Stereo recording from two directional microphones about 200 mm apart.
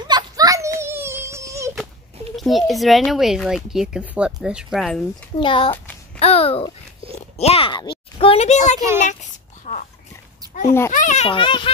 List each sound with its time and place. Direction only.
0.0 s a sound: 20° right (ahead or behind)
2.3 s speech: centre (ahead or behind)
5.4 s a child's voice: 25° left (ahead or behind)